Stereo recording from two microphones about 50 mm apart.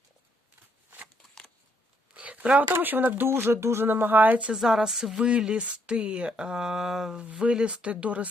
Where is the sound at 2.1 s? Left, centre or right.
Right.